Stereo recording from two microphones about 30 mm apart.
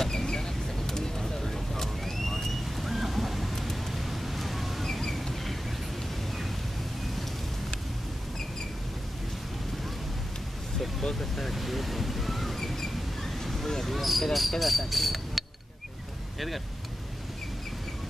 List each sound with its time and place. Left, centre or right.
0.1 s vehicle: centre
1.4 s vehicle: centre
4.8 s a sound: centre
11.0 s speech: centre
11.5 s waves: centre
12.7 s a sound: centre
16.3 s vehicle: centre